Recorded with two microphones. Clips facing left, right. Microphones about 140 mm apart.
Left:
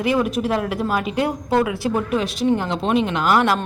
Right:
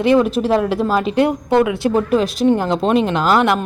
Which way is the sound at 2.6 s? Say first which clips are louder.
Right 4 dB; 40° right (ahead or behind).